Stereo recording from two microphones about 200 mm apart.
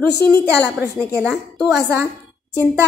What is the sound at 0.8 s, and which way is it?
Speech, 45° left (ahead or behind).